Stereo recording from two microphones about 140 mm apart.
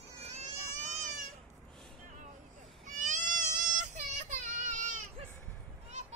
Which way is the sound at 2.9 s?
65° right (ahead or behind).